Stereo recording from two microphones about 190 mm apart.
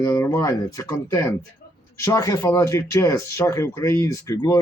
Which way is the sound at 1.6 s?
55° left (ahead or behind).